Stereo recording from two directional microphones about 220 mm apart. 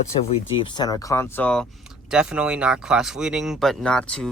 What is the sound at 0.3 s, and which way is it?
Speech, 20° left (ahead or behind).